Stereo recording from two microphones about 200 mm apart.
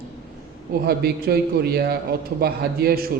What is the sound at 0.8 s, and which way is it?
A man's voice, 50° right (ahead or behind).